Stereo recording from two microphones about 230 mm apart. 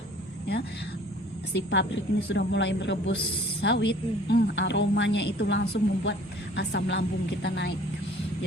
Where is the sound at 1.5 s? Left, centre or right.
Left.